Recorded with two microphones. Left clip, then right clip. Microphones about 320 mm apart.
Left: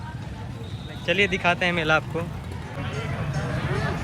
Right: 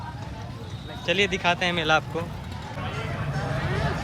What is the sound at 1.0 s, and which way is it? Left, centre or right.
Speech, centre.